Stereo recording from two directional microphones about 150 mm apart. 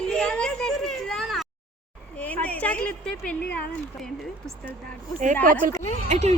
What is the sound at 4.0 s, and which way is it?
Speech, 5° left (ahead or behind).